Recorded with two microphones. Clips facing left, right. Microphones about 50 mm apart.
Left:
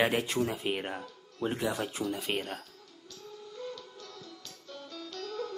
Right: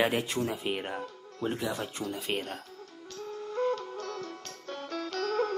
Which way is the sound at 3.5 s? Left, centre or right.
Right.